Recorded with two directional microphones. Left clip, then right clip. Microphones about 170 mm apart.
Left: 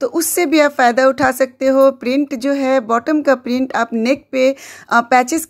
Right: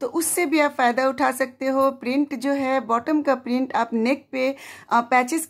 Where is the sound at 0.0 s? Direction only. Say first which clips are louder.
Left 7 dB; 25° left (ahead or behind).